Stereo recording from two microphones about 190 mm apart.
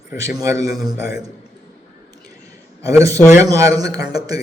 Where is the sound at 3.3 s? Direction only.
15° right (ahead or behind).